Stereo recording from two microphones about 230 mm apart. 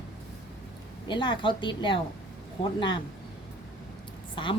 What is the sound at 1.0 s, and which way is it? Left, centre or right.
Speech, left.